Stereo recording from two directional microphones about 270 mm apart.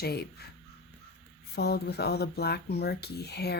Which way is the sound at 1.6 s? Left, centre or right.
Left.